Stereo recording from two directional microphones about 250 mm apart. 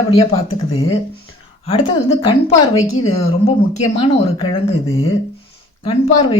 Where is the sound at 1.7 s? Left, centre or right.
Left.